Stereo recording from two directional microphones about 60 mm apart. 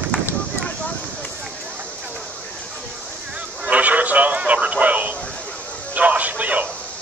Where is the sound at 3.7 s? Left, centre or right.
Right.